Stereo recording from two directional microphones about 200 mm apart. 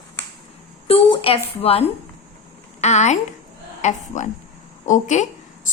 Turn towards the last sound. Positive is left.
turn(degrees=35)  # may be behind; listen again after turning